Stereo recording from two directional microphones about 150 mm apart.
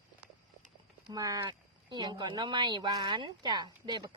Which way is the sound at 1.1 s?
25° right (ahead or behind).